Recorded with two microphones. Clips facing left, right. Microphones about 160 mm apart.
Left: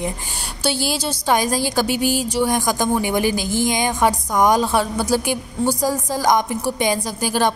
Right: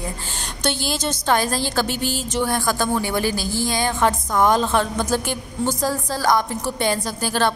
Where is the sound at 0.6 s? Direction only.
10° left (ahead or behind).